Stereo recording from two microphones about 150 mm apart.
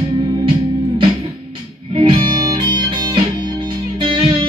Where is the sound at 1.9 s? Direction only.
35° right (ahead or behind).